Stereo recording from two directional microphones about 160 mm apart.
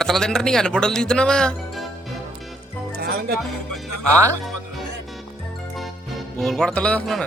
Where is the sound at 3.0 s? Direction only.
75° right (ahead or behind).